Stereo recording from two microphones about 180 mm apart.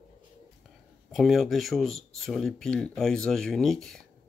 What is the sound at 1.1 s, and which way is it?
Speech, centre (ahead or behind).